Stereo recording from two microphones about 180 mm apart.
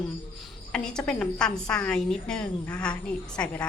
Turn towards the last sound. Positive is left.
turn(degrees=5)  # may be behind; listen again after turning